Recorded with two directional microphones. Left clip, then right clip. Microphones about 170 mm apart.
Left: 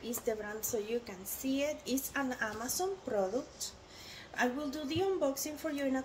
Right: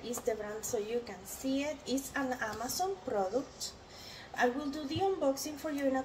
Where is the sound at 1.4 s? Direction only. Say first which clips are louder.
Left 1 dB; 40° left (ahead or behind).